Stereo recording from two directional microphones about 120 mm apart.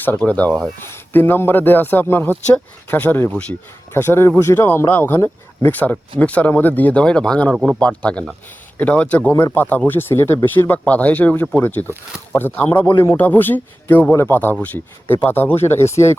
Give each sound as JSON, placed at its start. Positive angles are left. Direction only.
{"t": 0.0, "sound": "speech", "side_deg": 15}
{"t": 7.5, "sound": "speech", "side_deg": -5}
{"t": 7.8, "sound": "speech", "side_deg": 10}